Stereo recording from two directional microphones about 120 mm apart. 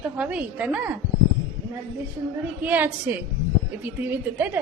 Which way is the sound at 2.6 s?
15° right (ahead or behind).